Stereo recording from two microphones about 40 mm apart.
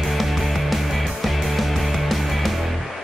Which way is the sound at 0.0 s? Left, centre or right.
Centre.